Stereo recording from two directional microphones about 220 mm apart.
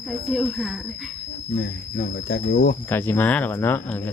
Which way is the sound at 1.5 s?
45° left (ahead or behind).